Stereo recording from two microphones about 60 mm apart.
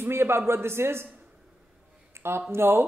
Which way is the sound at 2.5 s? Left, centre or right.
Right.